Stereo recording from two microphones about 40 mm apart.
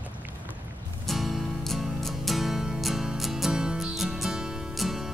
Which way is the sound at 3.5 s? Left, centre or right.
Centre.